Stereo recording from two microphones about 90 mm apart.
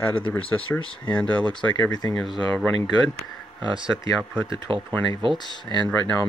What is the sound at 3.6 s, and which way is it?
Speech, 65° right (ahead or behind).